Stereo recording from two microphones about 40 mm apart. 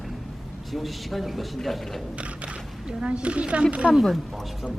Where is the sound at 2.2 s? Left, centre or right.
Right.